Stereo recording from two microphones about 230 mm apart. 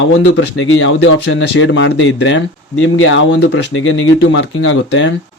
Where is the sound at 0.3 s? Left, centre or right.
Left.